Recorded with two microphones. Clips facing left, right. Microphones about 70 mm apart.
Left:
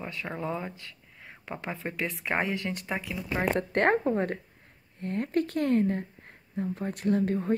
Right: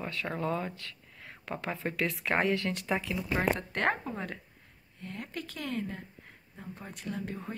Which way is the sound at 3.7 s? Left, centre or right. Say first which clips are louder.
Left 7 dB; left.